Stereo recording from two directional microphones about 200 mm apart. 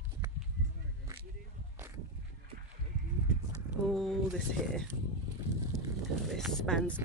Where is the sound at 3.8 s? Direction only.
Centre (ahead or behind).